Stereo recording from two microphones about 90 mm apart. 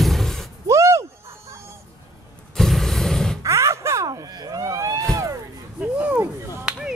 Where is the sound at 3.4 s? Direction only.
35° right (ahead or behind).